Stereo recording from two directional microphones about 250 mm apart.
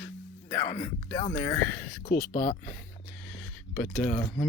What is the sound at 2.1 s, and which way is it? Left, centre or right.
Speech, left.